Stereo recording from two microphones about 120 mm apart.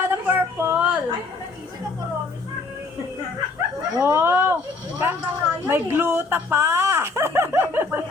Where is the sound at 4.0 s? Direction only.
20° right (ahead or behind).